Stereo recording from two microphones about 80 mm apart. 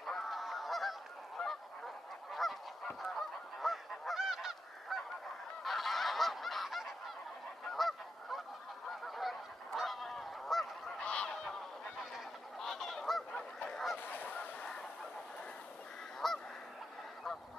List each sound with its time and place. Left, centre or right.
0.0 s goose: centre
3.6 s goose: centre
11.0 s goose: centre
12.5 s goose: centre
13.9 s goose: left
14.6 s fowl: centre
16.2 s goose: centre